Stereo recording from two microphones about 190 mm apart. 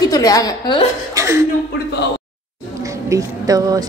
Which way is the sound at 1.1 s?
15° right (ahead or behind).